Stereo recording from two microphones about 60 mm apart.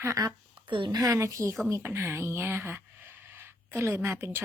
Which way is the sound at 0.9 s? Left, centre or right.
Right.